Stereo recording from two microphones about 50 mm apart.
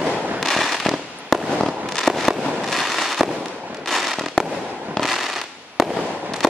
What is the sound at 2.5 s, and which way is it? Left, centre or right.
Fireworks, centre.